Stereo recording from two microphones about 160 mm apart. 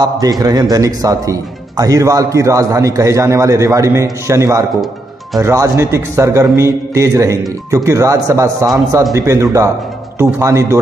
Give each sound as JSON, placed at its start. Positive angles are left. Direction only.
{"t": 0.0, "sound": "a man's voice", "side_deg": -25}